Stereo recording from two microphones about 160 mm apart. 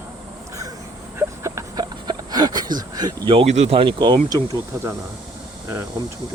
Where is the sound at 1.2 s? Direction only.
20° right (ahead or behind).